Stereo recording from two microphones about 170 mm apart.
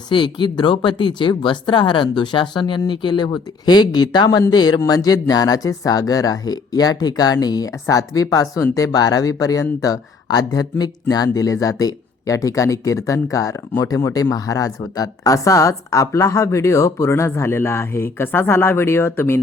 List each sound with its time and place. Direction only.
0.1 s speech: 25° left (ahead or behind)